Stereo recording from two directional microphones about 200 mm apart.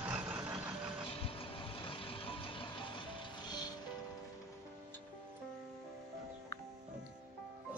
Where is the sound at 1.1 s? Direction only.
30° left (ahead or behind).